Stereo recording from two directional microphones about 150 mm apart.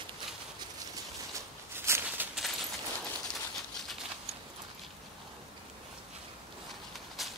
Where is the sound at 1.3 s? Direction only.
15° right (ahead or behind).